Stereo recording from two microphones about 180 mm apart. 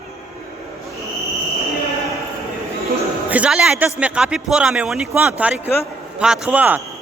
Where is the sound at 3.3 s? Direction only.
5° right (ahead or behind).